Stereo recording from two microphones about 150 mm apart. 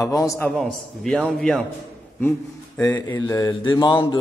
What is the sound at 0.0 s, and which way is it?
Speech, 20° left (ahead or behind).